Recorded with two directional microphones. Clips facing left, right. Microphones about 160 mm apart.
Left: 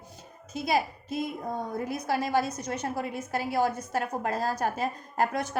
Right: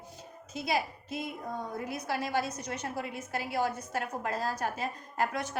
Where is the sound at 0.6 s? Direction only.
40° left (ahead or behind).